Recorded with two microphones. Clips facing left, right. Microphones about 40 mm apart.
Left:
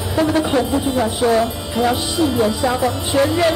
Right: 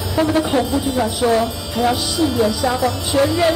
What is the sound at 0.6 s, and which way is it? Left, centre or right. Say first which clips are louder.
Speech: left 1 dB; left.